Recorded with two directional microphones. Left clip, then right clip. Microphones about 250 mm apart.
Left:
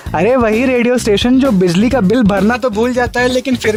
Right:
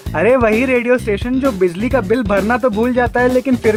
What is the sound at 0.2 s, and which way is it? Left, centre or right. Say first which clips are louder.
Speech: even; left.